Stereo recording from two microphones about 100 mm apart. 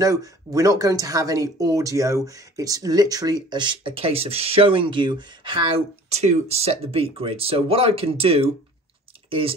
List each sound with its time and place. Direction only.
0.0 s speech: 35° right (ahead or behind); by 9.6 s 70° right (ahead or behind)